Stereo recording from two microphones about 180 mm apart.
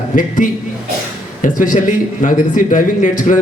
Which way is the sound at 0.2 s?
45° left (ahead or behind).